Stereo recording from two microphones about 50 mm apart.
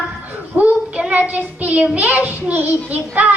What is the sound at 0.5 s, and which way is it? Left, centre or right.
Child singing, right.